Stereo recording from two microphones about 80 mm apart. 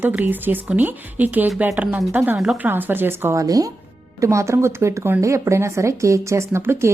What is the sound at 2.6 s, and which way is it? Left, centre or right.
Speech, right.